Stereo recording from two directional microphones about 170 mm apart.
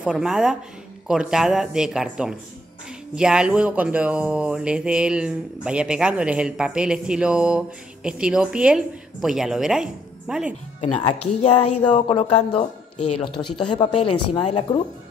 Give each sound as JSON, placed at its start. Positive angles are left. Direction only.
{"t": 0.0, "sound": "speech", "side_deg": 0}
{"t": 10.8, "sound": "speech", "side_deg": 30}
{"t": 13.7, "sound": "speech", "side_deg": 30}